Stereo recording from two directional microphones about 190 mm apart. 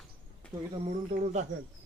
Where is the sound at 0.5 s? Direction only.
15° right (ahead or behind).